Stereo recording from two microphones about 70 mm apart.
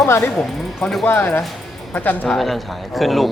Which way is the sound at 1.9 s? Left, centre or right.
Left.